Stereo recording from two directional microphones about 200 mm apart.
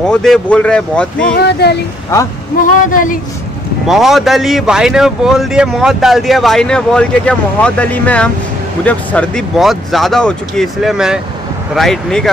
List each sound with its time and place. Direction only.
0.0 s a man's voice: 5° left (ahead or behind)
1.3 s a woman's voice: 55° left (ahead or behind)
3.8 s a man's voice: centre (ahead or behind)